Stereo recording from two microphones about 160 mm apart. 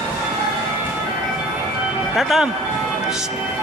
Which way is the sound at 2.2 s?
Centre (ahead or behind).